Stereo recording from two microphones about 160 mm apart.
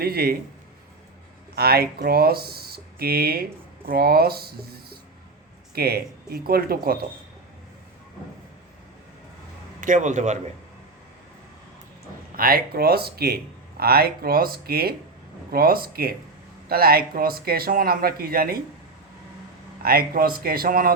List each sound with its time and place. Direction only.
0.0 s speech: 70° right (ahead or behind)
1.5 s speech: 75° right (ahead or behind)
9.8 s a man's voice: 50° right (ahead or behind)
12.4 s speech: 70° right (ahead or behind)
19.8 s speech: 70° right (ahead or behind)